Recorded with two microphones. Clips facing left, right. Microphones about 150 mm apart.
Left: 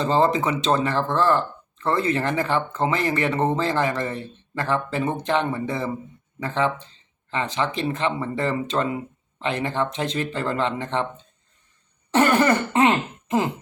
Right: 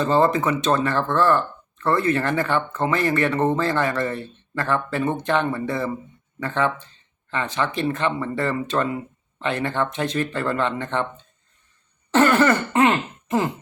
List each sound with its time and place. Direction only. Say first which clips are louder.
0.0 s speech: right 1 dB; 20° left (ahead or behind)
12.1 s speech: right 1 dB; 20° left (ahead or behind)